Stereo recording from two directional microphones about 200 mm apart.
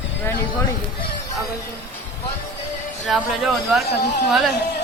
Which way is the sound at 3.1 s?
Centre (ahead or behind).